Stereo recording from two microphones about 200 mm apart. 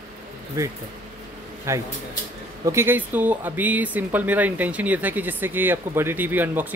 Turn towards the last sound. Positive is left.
turn(degrees=-10)  # may be behind; listen again after turning